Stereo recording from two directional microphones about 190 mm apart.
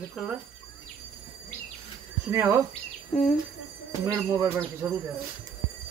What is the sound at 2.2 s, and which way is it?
Speech, 10° right (ahead or behind).